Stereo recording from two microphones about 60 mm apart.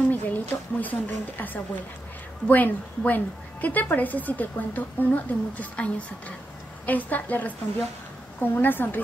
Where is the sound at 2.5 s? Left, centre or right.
Left.